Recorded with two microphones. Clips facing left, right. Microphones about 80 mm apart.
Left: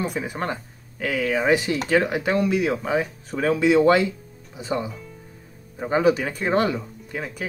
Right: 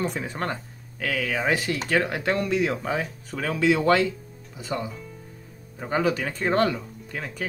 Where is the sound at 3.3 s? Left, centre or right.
Left.